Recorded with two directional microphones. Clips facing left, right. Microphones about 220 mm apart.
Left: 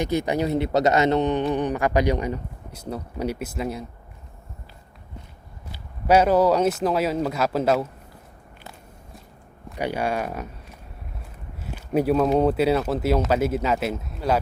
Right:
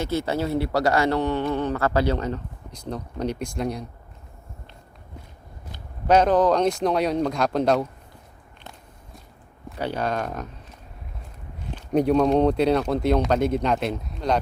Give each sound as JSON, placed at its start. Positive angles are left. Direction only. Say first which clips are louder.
{"t": 0.0, "sound": "a man's voice", "louder": "left 2 dB", "side_deg": 15}
{"t": 5.7, "sound": "speech", "louder": "even", "side_deg": 10}
{"t": 9.7, "sound": "speech", "louder": "left 1 dB", "side_deg": 10}